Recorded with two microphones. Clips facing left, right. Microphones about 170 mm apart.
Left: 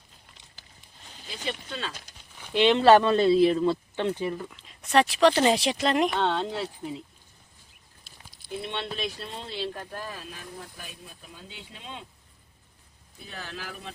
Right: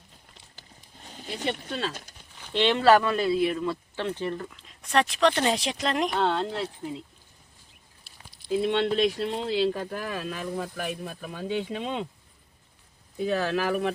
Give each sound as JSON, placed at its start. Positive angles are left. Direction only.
{"t": 0.9, "sound": "speech", "side_deg": -45}
{"t": 2.4, "sound": "speech", "side_deg": 15}
{"t": 4.1, "sound": "speech", "side_deg": 10}
{"t": 8.4, "sound": "speech", "side_deg": -90}
{"t": 13.1, "sound": "speech", "side_deg": -75}